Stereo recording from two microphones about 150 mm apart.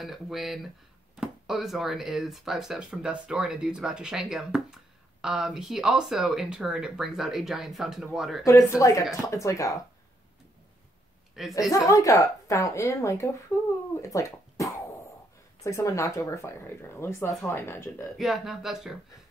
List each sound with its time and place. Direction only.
0.0 s speech: centre (ahead or behind)
8.5 s speech: 20° left (ahead or behind)
11.4 s a woman's voice: 5° right (ahead or behind)
11.7 s speech: 20° left (ahead or behind)
14.0 s a sound: 20° left (ahead or behind)
15.6 s speech: 20° left (ahead or behind)
18.1 s speech: centre (ahead or behind)